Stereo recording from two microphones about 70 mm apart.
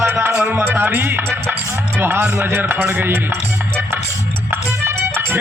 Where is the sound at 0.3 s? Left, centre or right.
Centre.